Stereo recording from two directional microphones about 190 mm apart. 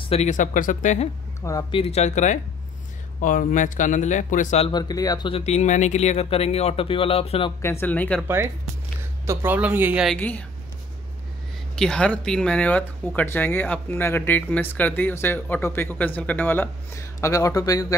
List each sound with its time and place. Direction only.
0.0 s speech: 35° left (ahead or behind)
1.4 s a man's voice: 20° left (ahead or behind); by 4.6 s 40° left (ahead or behind)
4.6 s speech: 20° left (ahead or behind)
7.6 s speech: 10° left (ahead or behind)
9.2 s speech: 15° right (ahead or behind)
10.1 s speech: 10° left (ahead or behind)
11.7 s speech: 5° left (ahead or behind)